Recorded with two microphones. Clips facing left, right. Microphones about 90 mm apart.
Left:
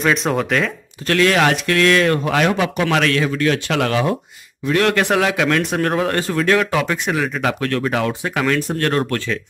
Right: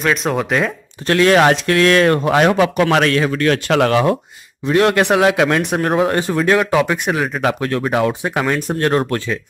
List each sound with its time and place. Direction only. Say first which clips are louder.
0.0 s speech: even; centre (ahead or behind)
1.0 s speech: right 4 dB; 30° right (ahead or behind)
3.3 s speech: right 3 dB; 50° right (ahead or behind)
4.6 s speech: right 3 dB; 25° right (ahead or behind)